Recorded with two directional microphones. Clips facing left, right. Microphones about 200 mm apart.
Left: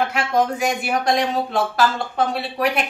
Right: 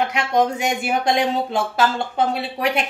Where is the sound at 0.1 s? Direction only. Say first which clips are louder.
Right 1 dB; 20° right (ahead or behind).